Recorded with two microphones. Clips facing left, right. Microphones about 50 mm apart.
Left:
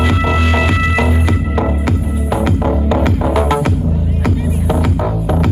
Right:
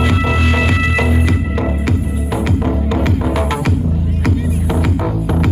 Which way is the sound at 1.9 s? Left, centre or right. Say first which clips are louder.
Left 1 dB; centre.